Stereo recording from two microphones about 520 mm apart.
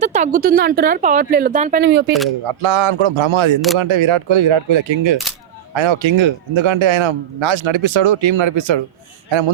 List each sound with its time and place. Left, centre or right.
0.0 s speech: centre
2.4 s a man's voice: right